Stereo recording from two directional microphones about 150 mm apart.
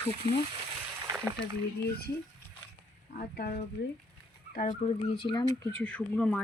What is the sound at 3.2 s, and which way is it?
Speech, 90° left.